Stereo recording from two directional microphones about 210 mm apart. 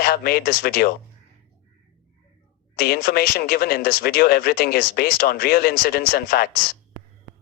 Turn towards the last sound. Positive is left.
turn(degrees=45)  # may be behind; listen again after turning